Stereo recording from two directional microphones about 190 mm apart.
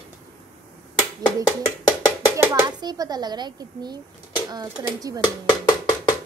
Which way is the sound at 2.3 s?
20° right (ahead or behind).